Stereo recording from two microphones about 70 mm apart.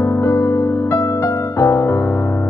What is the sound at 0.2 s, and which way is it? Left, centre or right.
Music, left.